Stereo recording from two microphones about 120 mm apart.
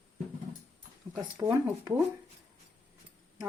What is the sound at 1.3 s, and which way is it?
Speech, 25° right (ahead or behind).